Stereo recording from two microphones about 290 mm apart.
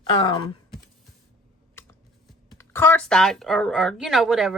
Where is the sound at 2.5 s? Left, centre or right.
Centre.